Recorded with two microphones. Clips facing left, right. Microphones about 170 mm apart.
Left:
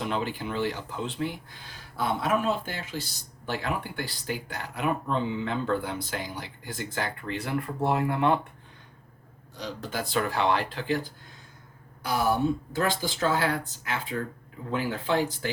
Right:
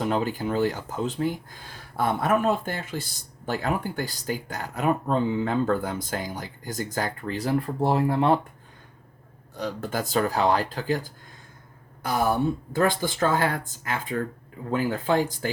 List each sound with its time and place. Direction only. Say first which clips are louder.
0.0 s speech: right 5 dB; 45° right (ahead or behind)
9.6 s speech: right 4 dB; 50° right (ahead or behind)
12.0 s speech: right 1 dB; 50° right (ahead or behind)